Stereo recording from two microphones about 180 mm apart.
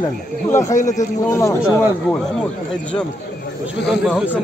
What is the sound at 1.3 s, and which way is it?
Speech, 15° left (ahead or behind).